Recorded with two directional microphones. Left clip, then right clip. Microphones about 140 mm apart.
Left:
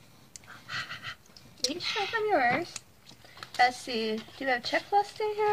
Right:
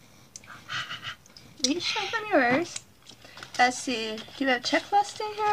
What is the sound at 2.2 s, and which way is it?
Speech, 20° right (ahead or behind).